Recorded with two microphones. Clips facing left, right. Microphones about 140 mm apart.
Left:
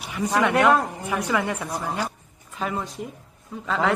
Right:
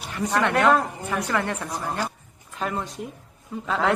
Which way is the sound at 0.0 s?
5° left (ahead or behind).